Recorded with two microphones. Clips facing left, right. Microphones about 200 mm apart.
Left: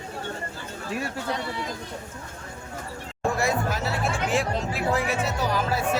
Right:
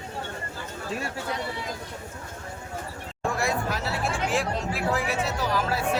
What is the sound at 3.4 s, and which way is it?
Music, centre (ahead or behind).